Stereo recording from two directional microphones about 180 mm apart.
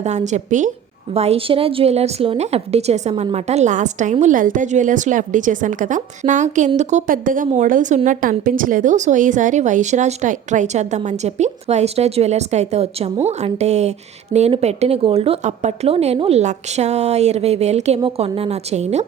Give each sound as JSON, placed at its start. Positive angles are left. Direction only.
{"t": 0.0, "sound": "a woman's voice", "side_deg": -40}